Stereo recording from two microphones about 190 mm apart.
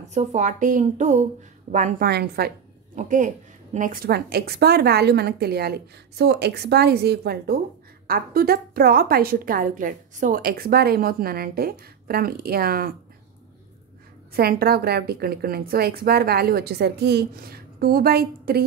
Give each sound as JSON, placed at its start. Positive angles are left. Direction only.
{"t": 0.1, "sound": "a woman's voice", "side_deg": -35}
{"t": 3.0, "sound": "a woman's voice", "side_deg": -40}
{"t": 14.3, "sound": "a woman's voice", "side_deg": -55}